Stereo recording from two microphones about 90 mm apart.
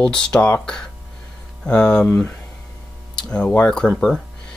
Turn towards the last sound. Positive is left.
turn(degrees=10)  # may be behind; listen again after turning